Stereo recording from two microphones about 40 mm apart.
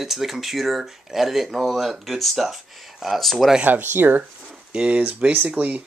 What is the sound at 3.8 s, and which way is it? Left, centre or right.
Speech, right.